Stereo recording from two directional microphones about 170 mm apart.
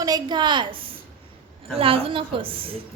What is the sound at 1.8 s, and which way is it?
Speech, 35° right (ahead or behind).